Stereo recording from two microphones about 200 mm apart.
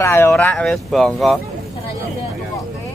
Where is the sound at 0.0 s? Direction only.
10° left (ahead or behind).